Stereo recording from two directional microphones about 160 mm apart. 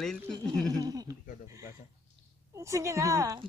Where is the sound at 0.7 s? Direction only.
25° right (ahead or behind).